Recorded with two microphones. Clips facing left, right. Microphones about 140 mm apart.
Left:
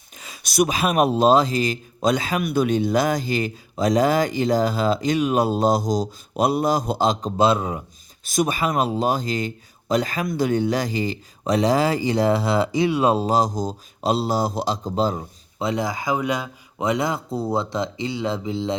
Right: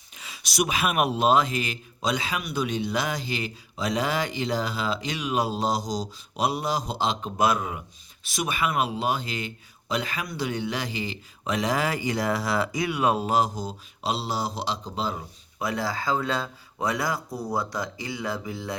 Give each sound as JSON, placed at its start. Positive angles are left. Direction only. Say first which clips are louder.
{"t": 0.2, "sound": "a man's voice", "louder": "left 7 dB", "side_deg": 45}
{"t": 8.2, "sound": "speech", "louder": "left 6 dB", "side_deg": 45}
{"t": 15.5, "sound": "speech", "louder": "left 4 dB", "side_deg": 20}